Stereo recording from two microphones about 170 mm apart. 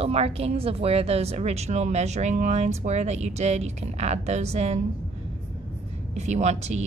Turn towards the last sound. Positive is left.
turn(degrees=-40)  # may be behind; listen again after turning